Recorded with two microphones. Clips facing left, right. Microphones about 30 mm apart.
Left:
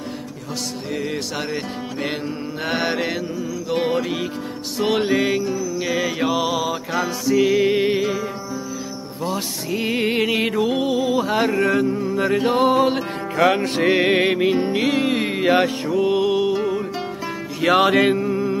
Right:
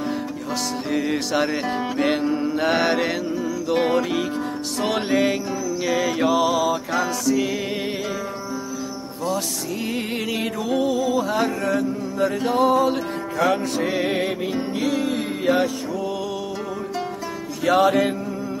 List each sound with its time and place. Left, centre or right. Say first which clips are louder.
0.9 s music: right 4 dB; centre
7.2 s music: left 5 dB; centre
9.2 s music: even; left
17.6 s mantra: left 2 dB; left